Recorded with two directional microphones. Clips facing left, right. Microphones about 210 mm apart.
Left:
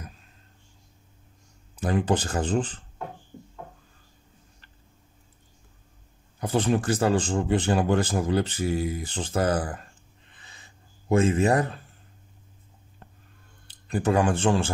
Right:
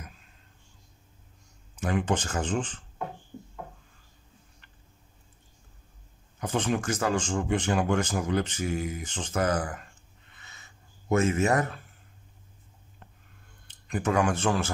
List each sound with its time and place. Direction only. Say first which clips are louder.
1.8 s speech: left 3 dB; 35° left (ahead or behind)
6.4 s speech: left 4 dB; 35° left (ahead or behind)
10.3 s a sound: even; 30° left (ahead or behind)
13.7 s speech: left 4 dB; 35° left (ahead or behind)